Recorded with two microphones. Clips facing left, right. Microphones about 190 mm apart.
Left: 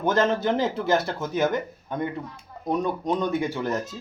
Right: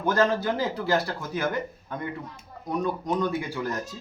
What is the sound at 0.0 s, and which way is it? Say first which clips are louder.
Speech: left 1 dB; 20° left (ahead or behind).